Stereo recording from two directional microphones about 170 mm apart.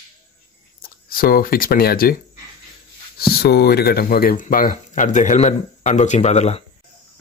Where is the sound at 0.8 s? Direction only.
60° left (ahead or behind).